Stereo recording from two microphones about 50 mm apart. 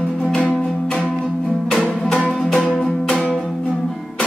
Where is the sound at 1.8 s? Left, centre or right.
Centre.